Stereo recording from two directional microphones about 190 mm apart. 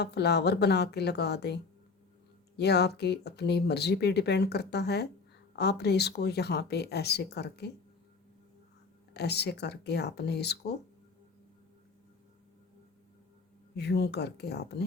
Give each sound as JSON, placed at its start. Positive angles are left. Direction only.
{"t": 0.0, "sound": "speech", "side_deg": 60}
{"t": 2.6, "sound": "speech", "side_deg": 60}
{"t": 9.1, "sound": "speech", "side_deg": 60}
{"t": 13.7, "sound": "speech", "side_deg": 60}